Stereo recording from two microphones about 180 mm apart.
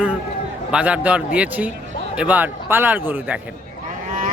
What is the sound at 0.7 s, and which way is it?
Speech, 5° right (ahead or behind).